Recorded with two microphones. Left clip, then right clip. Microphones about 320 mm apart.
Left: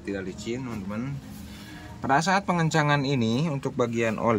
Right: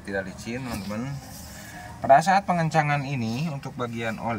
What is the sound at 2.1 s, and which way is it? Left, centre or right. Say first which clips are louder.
Speech: right 1 dB; centre.